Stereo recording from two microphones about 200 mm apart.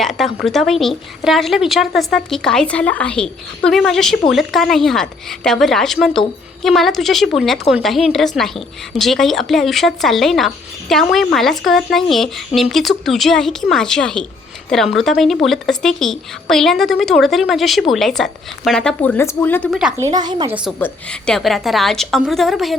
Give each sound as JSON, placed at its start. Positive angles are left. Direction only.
{"t": 0.0, "sound": "a woman's voice", "side_deg": 0}
{"t": 20.0, "sound": "speech", "side_deg": -20}
{"t": 20.7, "sound": "a woman's voice", "side_deg": 5}